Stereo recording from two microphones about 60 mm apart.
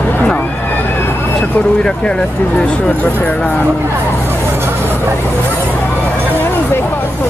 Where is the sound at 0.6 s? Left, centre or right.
Left.